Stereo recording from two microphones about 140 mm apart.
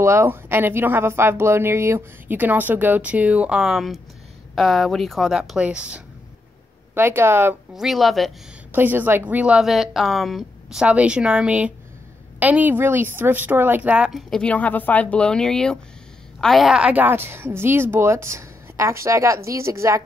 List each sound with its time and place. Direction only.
0.0 s speech: 20° right (ahead or behind)
7.7 s speech: centre (ahead or behind)
8.7 s speech: 15° right (ahead or behind)